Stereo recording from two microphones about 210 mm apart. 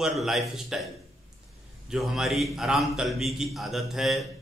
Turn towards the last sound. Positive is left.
turn(degrees=0)  # may be behind; listen again after turning